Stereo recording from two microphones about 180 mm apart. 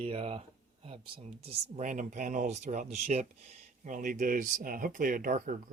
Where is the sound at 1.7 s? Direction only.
45° right (ahead or behind).